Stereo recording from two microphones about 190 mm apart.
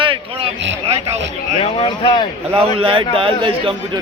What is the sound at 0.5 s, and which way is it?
Speech, 70° right (ahead or behind).